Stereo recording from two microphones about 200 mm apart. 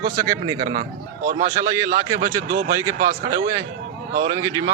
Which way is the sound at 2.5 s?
50° right (ahead or behind).